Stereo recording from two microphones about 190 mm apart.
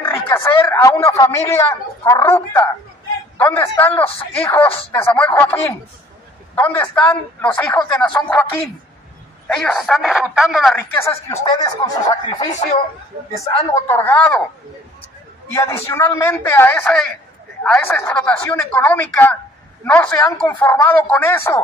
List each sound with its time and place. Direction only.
0.0 s speech: 15° left (ahead or behind)
11.0 s speech: 15° left (ahead or behind)
13.7 s speech: 15° left (ahead or behind)
15.5 s speech: 15° left (ahead or behind)